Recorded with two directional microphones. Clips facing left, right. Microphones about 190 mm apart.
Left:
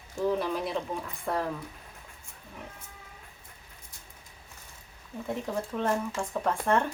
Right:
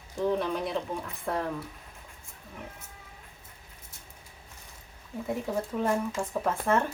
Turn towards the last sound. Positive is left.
turn(degrees=-5)  # may be behind; listen again after turning